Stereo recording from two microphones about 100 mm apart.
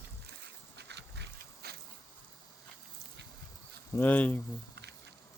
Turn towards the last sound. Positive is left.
turn(degrees=15)  # may be behind; listen again after turning